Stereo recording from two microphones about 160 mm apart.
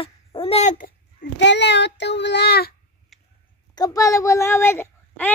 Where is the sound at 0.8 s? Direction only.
75° left (ahead or behind).